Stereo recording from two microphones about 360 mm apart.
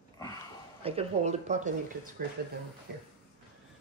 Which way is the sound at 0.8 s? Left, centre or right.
Centre.